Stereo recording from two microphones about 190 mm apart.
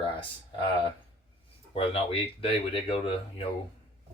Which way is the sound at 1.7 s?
30° left (ahead or behind).